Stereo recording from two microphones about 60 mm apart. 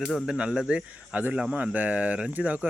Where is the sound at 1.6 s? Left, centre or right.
Right.